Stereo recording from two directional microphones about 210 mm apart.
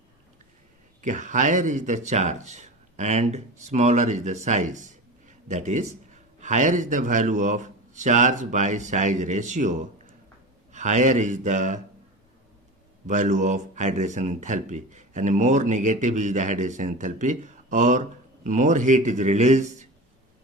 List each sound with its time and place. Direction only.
1.0 s speech: 35° right (ahead or behind)
13.1 s speech: 35° right (ahead or behind)